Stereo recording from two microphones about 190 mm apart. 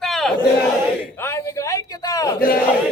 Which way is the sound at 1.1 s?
15° left (ahead or behind).